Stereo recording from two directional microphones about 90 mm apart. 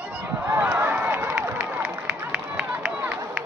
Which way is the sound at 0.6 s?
20° right (ahead or behind).